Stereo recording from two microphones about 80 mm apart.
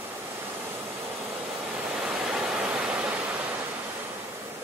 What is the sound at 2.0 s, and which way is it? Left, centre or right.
Waterfall, centre.